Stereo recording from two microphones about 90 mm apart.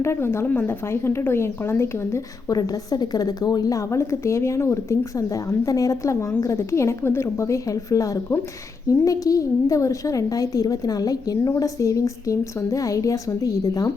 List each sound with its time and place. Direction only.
0.0 s a woman's voice: 30° left (ahead or behind)
2.5 s a woman's voice: 45° left (ahead or behind)